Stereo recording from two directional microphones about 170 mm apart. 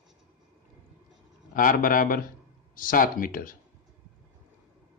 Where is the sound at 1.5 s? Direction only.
55° left (ahead or behind).